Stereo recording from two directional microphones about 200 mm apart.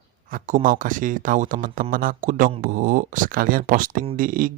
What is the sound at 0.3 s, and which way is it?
Speech, 40° right (ahead or behind).